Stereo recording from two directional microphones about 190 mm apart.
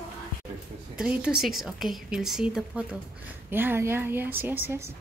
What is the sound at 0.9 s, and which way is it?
A woman's voice, 5° right (ahead or behind).